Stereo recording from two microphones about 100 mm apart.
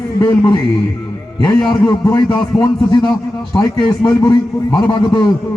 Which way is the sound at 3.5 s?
50° left (ahead or behind).